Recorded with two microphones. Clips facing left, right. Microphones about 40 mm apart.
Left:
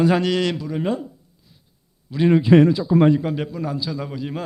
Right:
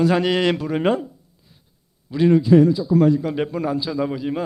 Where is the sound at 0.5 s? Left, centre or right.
Right.